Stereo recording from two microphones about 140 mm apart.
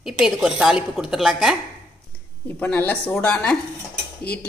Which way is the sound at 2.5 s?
15° left (ahead or behind).